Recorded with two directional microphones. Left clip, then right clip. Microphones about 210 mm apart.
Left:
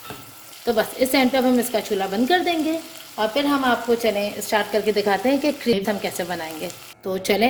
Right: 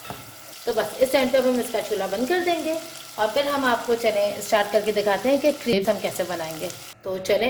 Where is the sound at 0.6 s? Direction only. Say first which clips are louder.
Left 1 dB; 45° left (ahead or behind).